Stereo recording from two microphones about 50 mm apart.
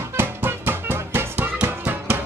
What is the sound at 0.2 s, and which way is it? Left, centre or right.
Music, right.